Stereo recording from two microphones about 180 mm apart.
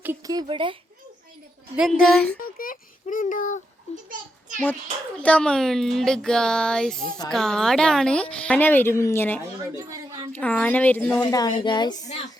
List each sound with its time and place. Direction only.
0.0 s speech: 15° right (ahead or behind)
1.7 s speech: 5° right (ahead or behind)
2.4 s a sound: 50° left (ahead or behind)
4.1 s a sound: 45° right (ahead or behind)
5.2 s a woman's voice: 5° left (ahead or behind)
9.7 s a child's voice: 20° right (ahead or behind)
10.3 s a woman's voice: 10° left (ahead or behind)
12.0 s speech: 40° left (ahead or behind)